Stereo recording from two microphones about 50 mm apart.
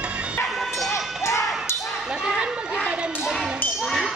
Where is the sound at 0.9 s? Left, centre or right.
Left.